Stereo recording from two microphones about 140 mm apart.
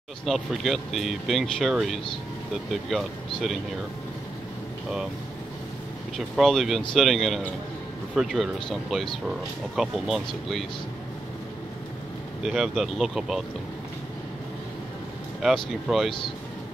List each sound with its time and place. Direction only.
0.2 s speech: centre (ahead or behind)
6.1 s speech: centre (ahead or behind)
12.4 s speech: centre (ahead or behind)
15.4 s speech: centre (ahead or behind)